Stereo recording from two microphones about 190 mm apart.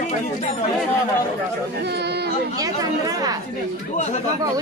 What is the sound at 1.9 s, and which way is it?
Speech, 60° right (ahead or behind).